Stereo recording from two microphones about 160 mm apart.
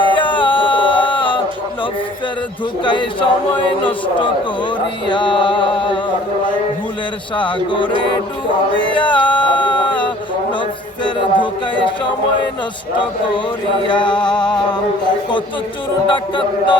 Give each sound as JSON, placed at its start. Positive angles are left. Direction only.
{"t": 0.1, "sound": "music", "side_deg": 30}
{"t": 2.8, "sound": "speech", "side_deg": 30}
{"t": 5.0, "sound": "music", "side_deg": 30}
{"t": 7.3, "sound": "music", "side_deg": 30}
{"t": 9.0, "sound": "music", "side_deg": 30}
{"t": 13.8, "sound": "music", "side_deg": 30}
{"t": 16.0, "sound": "music", "side_deg": 30}